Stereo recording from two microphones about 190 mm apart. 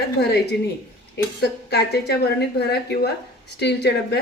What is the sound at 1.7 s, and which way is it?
A woman's voice, 60° left (ahead or behind).